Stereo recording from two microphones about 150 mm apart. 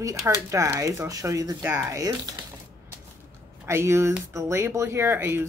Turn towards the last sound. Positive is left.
turn(degrees=-15)  # may be behind; listen again after turning